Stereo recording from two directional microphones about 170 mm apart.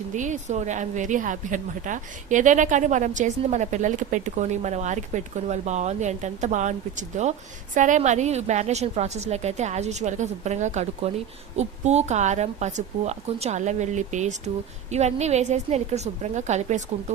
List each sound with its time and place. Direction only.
0.1 s a woman's voice: 45° right (ahead or behind)